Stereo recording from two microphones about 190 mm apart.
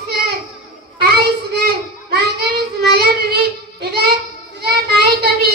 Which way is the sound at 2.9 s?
55° right (ahead or behind).